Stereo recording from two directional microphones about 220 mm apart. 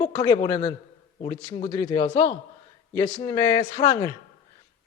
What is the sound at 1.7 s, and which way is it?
A man's voice, 15° left (ahead or behind).